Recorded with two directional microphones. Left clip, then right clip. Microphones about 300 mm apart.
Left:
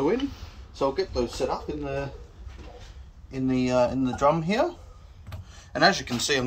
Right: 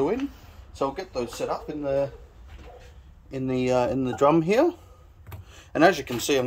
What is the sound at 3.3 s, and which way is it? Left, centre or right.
Speech, right.